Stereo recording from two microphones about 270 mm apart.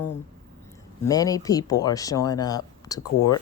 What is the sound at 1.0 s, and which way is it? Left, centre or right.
Speech, centre.